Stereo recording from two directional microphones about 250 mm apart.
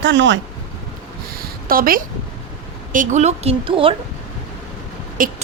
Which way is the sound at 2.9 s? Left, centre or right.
Right.